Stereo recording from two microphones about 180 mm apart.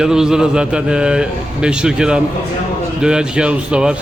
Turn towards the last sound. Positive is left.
turn(degrees=-5)  # may be behind; listen again after turning